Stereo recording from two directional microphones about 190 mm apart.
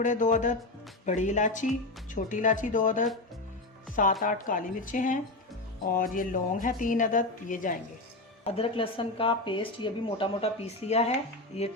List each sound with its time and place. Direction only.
0.0 s a woman's voice: 40° left (ahead or behind)
8.4 s speech: 30° left (ahead or behind)